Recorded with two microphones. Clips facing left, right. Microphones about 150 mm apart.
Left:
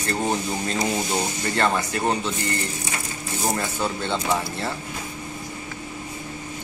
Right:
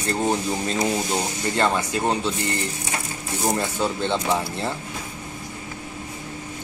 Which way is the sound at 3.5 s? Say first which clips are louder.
Right 3 dB; 15° right (ahead or behind).